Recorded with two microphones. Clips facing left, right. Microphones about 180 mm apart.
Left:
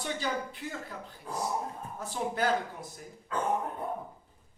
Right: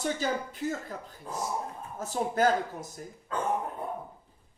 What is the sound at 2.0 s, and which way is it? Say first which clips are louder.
Speech: right 5 dB; 45° right (ahead or behind).